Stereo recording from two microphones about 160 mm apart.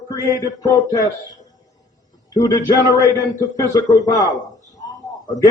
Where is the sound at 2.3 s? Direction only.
25° left (ahead or behind).